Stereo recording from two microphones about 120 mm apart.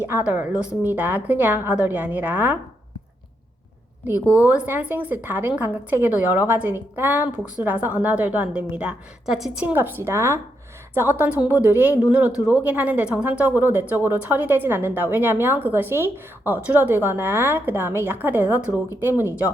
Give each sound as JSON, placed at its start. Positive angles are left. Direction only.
{"t": 0.1, "sound": "a woman's voice", "side_deg": -15}
{"t": 4.0, "sound": "a woman's voice", "side_deg": -15}